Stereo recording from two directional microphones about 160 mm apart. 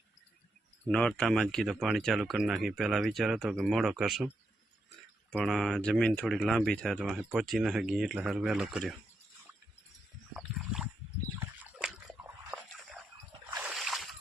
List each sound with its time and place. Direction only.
0.9 s speech: 5° left (ahead or behind)
5.4 s speech: centre (ahead or behind)
10.3 s boat: centre (ahead or behind)
13.6 s a sound: centre (ahead or behind)